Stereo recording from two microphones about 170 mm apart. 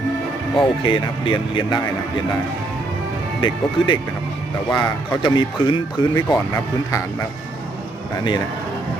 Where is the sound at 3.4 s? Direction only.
30° left (ahead or behind).